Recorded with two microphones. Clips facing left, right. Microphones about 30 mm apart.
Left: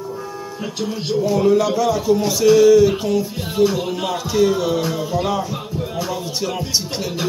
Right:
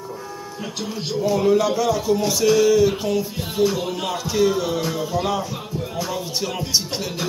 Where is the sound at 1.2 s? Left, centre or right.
Centre.